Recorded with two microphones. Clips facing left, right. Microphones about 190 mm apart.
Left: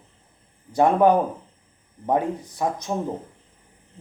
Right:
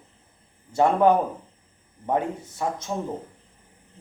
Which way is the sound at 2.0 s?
15° left (ahead or behind).